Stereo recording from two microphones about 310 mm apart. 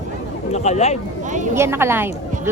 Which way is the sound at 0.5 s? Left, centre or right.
Left.